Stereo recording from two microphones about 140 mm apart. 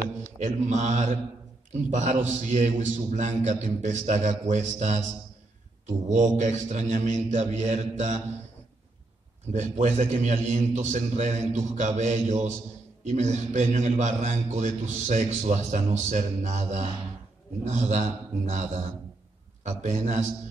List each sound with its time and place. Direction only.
0.4 s a man's voice: 60° right (ahead or behind)
6.0 s a man's voice: 60° right (ahead or behind)
9.5 s a man's voice: 55° right (ahead or behind)